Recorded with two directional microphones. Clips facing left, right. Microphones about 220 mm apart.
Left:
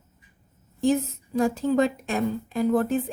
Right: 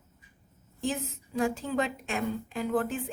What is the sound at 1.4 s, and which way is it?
Speech, 40° left (ahead or behind).